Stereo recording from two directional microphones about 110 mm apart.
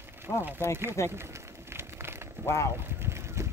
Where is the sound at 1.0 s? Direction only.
25° left (ahead or behind).